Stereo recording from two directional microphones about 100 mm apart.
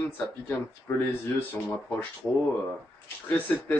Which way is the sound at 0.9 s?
20° left (ahead or behind).